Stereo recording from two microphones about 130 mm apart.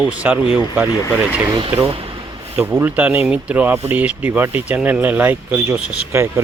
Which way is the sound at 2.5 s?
15° right (ahead or behind).